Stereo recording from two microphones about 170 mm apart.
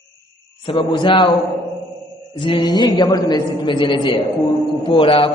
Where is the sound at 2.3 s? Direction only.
30° left (ahead or behind).